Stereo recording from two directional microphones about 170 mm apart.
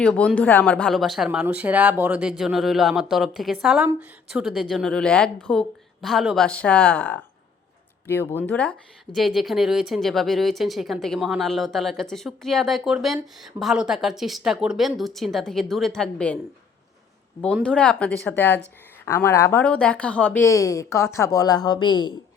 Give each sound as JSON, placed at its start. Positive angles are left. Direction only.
{"t": 0.0, "sound": "speech", "side_deg": 5}
{"t": 17.4, "sound": "speech", "side_deg": 5}